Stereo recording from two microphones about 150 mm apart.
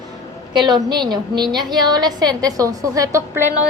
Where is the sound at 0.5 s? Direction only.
30° right (ahead or behind).